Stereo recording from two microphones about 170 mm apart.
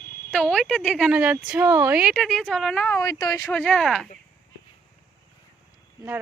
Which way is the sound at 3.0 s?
20° left (ahead or behind).